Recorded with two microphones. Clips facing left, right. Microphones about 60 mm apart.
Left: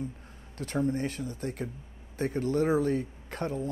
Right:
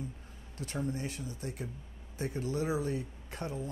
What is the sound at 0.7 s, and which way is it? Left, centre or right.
Speech, left.